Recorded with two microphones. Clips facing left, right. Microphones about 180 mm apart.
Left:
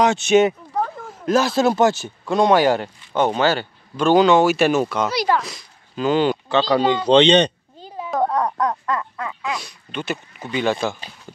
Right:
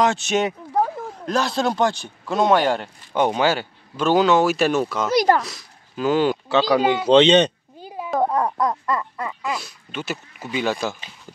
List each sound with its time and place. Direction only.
0.0 s speech: centre (ahead or behind)
3.2 s speech: 10° right (ahead or behind)
5.1 s speech: 45° right (ahead or behind)
5.4 s speech: centre (ahead or behind)